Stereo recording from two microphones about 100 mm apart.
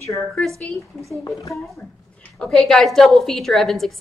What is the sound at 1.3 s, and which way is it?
Speech, 35° left (ahead or behind).